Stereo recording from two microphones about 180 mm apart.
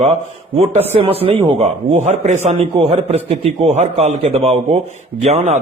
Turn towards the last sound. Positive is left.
turn(degrees=-40)  # may be behind; listen again after turning